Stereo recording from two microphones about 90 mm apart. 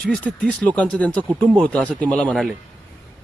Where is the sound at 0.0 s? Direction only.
10° left (ahead or behind).